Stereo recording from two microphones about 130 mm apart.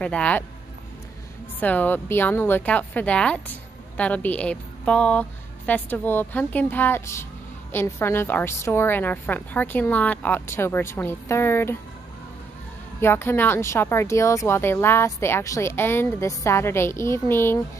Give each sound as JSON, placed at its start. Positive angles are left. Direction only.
{"t": 0.0, "sound": "a woman's voice", "side_deg": 10}
{"t": 1.6, "sound": "a woman's voice", "side_deg": 10}
{"t": 13.0, "sound": "a woman's voice", "side_deg": 15}